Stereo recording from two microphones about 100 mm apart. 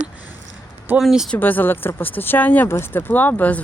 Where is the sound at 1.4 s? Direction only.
20° left (ahead or behind).